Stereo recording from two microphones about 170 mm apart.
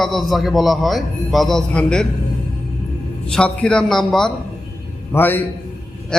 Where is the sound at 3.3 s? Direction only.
5° left (ahead or behind).